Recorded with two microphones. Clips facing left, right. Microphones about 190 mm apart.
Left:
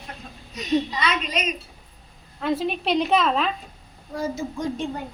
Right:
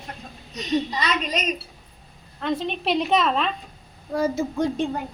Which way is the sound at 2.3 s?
5° left (ahead or behind).